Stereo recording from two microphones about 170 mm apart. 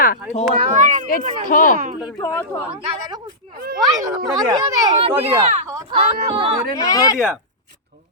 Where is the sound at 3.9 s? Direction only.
25° right (ahead or behind).